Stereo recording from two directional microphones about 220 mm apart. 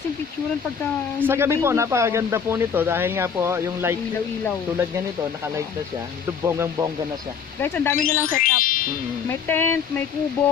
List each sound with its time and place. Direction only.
1.2 s speech: 10° right (ahead or behind)
6.4 s speech: 10° right (ahead or behind)
7.6 s speech: 10° left (ahead or behind)
8.4 s speech: 40° left (ahead or behind)
9.3 s speech: 10° left (ahead or behind)